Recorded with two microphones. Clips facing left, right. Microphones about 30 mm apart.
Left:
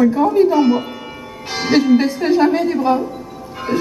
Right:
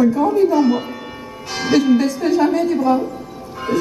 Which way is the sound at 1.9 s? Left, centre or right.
Left.